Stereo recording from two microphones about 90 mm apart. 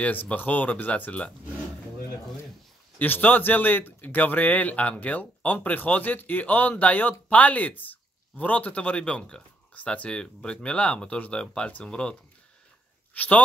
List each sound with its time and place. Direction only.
0.0 s speech: 20° left (ahead or behind)
3.0 s speech: 20° left (ahead or behind)